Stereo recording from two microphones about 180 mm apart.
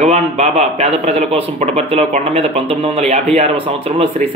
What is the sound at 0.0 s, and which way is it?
Speech, 35° right (ahead or behind).